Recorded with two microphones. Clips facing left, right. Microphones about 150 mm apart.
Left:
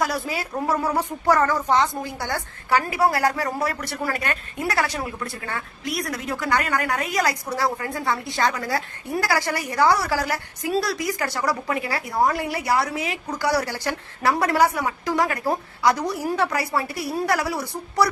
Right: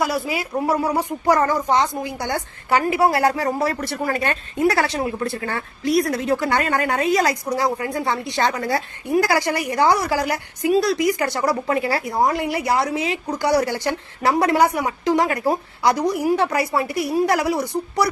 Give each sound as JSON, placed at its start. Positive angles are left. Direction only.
{"t": 0.0, "sound": "speech", "side_deg": -10}
{"t": 12.2, "sound": "speech", "side_deg": -20}